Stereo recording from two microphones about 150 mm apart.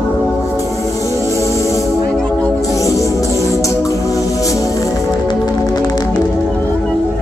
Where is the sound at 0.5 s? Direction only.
20° left (ahead or behind).